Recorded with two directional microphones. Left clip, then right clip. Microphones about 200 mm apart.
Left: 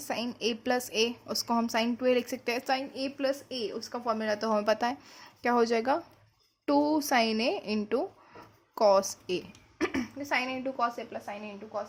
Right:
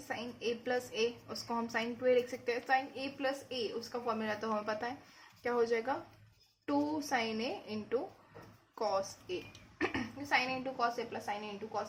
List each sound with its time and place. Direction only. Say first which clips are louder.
0.1 s a woman's voice: left 6 dB; 55° left (ahead or behind); by 11.2 s 30° left (ahead or behind)
11.3 s a woman's voice: left 1 dB; 10° left (ahead or behind)